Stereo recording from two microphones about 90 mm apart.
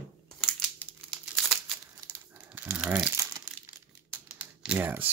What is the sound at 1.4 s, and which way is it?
Crumpling, centre (ahead or behind).